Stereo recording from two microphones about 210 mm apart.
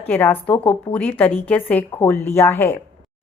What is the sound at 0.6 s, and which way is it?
Speech, 25° left (ahead or behind).